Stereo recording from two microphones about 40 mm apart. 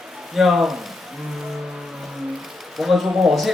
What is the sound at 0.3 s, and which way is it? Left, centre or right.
Speech, centre.